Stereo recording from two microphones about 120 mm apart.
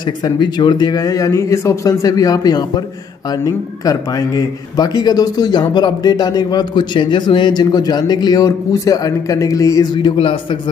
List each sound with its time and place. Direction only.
0.0 s a man's voice: 40° left (ahead or behind)
10.0 s a man's voice: 45° left (ahead or behind)